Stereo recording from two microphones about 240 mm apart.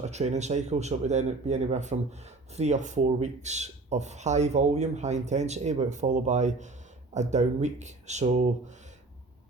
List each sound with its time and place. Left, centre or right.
0.0 s speech: right